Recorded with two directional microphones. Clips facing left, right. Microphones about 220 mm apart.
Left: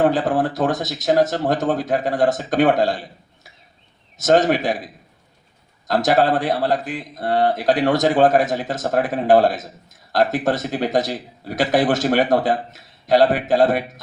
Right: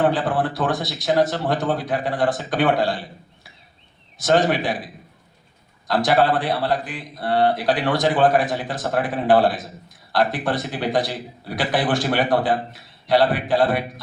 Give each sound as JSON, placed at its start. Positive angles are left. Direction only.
{"t": 0.0, "sound": "a man's voice", "side_deg": 45}
{"t": 5.9, "sound": "a man's voice", "side_deg": 45}